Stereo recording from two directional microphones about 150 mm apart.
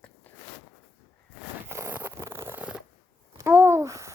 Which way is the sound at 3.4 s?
15° right (ahead or behind).